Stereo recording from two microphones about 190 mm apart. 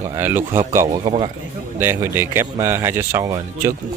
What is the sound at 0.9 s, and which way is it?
Speech, 30° right (ahead or behind).